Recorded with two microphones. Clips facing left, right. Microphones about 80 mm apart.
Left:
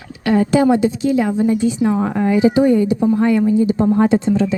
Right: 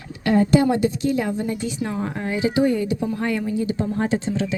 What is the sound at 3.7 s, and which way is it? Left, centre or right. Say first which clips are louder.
Speech: left 9 dB; left.